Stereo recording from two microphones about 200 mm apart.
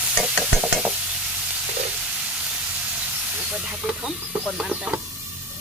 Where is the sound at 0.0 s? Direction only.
5° right (ahead or behind).